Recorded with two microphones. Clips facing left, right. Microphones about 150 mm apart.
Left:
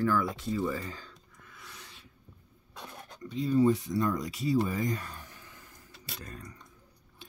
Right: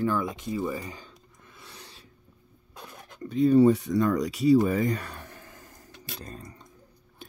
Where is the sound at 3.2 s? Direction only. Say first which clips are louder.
Right 6 dB; 55° right (ahead or behind).